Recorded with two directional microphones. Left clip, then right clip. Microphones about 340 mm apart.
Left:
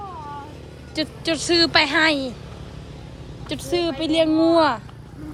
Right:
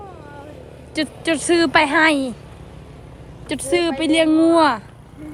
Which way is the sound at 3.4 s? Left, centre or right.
Right.